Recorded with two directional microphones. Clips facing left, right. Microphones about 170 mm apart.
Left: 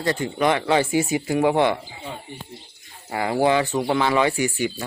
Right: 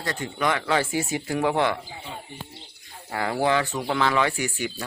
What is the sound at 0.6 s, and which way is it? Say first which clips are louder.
Speech: left 5 dB; 15° left (ahead or behind).